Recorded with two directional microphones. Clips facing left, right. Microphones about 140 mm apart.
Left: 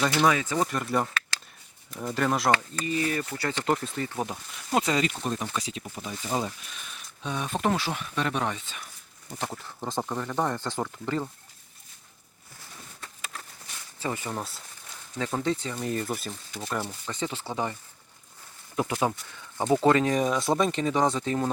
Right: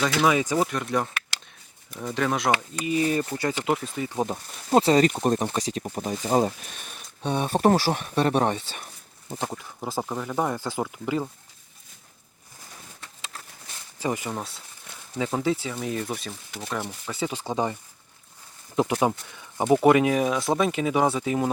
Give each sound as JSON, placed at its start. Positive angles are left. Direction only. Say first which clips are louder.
{"t": 0.0, "sound": "speech", "louder": "right 1 dB", "side_deg": 0}
{"t": 0.3, "sound": "speech", "louder": "right 3 dB", "side_deg": -15}
{"t": 0.7, "sound": "speech", "louder": "right 1 dB", "side_deg": 0}
{"t": 2.5, "sound": "speech", "louder": "right 1 dB", "side_deg": -15}
{"t": 4.4, "sound": "speech", "louder": "right 7 dB", "side_deg": -35}
{"t": 7.2, "sound": "speech", "louder": "right 7 dB", "side_deg": -35}
{"t": 9.4, "sound": "speech", "louder": "right 2 dB", "side_deg": -15}
{"t": 9.8, "sound": "speech", "louder": "right 1 dB", "side_deg": -5}
{"t": 14.0, "sound": "speech", "louder": "right 4 dB", "side_deg": -15}
{"t": 14.3, "sound": "speech", "louder": "right 1 dB", "side_deg": 0}
{"t": 16.8, "sound": "speech", "louder": "right 2 dB", "side_deg": -10}
{"t": 18.8, "sound": "speech", "louder": "right 4 dB", "side_deg": -20}